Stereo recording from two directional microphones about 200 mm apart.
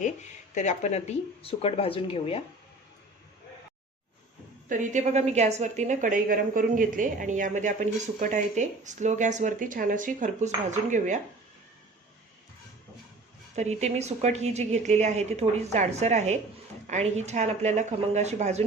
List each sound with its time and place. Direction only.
0.5 s speech: 35° left (ahead or behind)
4.7 s a woman's voice: 40° right (ahead or behind)
13.6 s a woman's voice: 35° right (ahead or behind)